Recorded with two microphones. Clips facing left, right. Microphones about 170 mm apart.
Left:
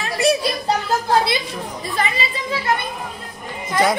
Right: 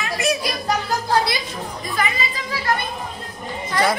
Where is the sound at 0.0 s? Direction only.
30° left (ahead or behind).